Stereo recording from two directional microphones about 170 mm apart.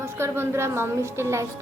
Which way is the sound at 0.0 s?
15° right (ahead or behind).